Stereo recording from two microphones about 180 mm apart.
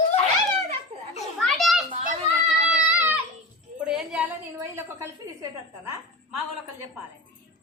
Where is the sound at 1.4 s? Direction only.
Centre (ahead or behind).